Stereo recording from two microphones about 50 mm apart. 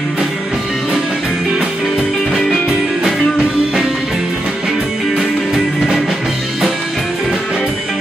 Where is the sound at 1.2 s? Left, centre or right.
Centre.